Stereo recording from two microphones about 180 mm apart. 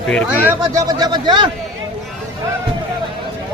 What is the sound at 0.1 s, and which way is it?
Speech, 10° left (ahead or behind).